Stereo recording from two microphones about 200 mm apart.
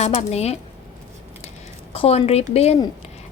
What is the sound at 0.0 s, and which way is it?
Speech, 30° left (ahead or behind).